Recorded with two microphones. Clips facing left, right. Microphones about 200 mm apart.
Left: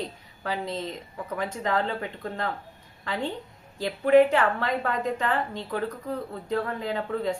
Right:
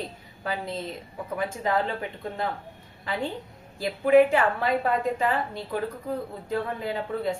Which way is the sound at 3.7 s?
10° right (ahead or behind).